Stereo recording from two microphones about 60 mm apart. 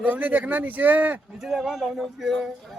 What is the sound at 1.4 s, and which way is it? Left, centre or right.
Speech, centre.